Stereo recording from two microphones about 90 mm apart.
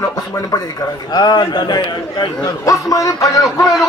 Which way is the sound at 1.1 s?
50° left (ahead or behind).